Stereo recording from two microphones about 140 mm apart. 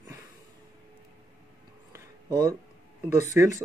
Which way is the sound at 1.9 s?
30° right (ahead or behind).